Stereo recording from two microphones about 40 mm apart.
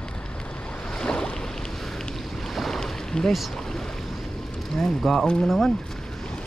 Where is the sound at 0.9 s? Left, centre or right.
Centre.